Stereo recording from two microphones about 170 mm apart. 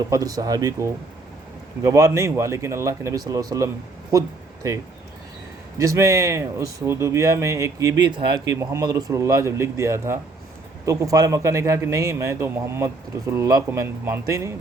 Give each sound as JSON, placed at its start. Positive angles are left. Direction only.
{"t": 0.1, "sound": "speech", "side_deg": -20}
{"t": 5.8, "sound": "a man's voice", "side_deg": -20}